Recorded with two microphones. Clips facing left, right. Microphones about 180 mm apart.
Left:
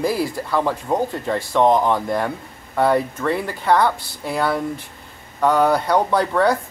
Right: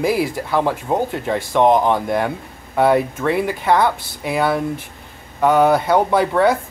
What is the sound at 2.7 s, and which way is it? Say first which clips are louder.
Speech: right 3 dB; 5° right (ahead or behind).